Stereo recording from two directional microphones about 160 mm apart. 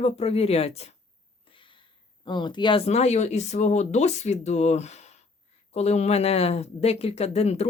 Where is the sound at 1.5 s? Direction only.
35° left (ahead or behind).